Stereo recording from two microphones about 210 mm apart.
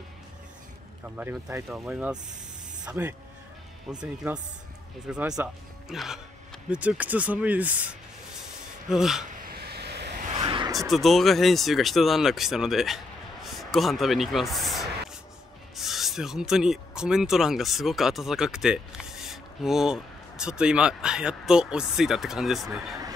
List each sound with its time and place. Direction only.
1.0 s speech: 10° right (ahead or behind)
9.5 s vehicle: 50° right (ahead or behind)
10.4 s a sound: 25° right (ahead or behind)
10.7 s speech: centre (ahead or behind)